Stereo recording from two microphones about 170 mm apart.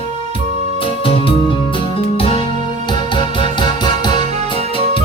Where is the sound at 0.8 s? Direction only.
30° left (ahead or behind).